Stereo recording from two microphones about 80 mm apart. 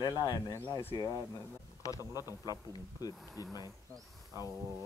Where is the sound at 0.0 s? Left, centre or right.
Left.